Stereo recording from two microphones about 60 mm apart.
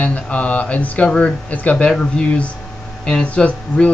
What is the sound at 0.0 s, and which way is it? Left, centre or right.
Speech, left.